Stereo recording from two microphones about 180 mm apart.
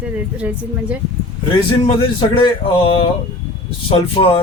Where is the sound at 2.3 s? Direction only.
30° left (ahead or behind).